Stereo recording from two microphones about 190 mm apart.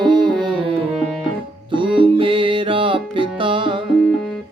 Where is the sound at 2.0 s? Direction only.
30° right (ahead or behind).